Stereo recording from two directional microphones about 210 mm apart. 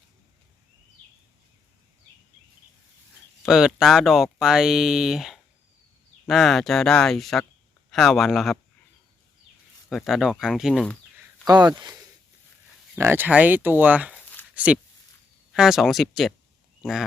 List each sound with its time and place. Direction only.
3.4 s speech: centre (ahead or behind)
9.9 s speech: centre (ahead or behind)
11.4 s speech: 20° right (ahead or behind)
13.0 s speech: 10° right (ahead or behind)
14.1 s a sound: 10° left (ahead or behind)
14.5 s speech: 5° right (ahead or behind)